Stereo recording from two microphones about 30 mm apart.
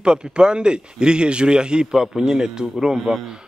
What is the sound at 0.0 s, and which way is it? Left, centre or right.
A man's voice, right.